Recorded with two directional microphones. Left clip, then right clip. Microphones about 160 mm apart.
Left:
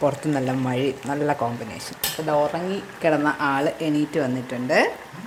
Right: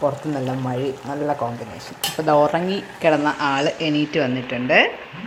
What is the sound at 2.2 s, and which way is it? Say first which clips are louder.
Speech: right 5 dB; 10° right (ahead or behind).